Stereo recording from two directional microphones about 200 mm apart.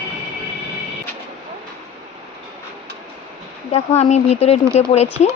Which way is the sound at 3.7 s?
35° left (ahead or behind).